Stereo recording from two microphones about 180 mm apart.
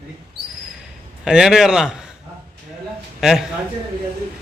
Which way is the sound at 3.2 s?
Centre (ahead or behind).